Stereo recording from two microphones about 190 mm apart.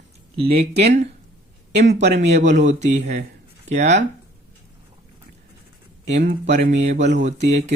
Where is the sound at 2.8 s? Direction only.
35° right (ahead or behind).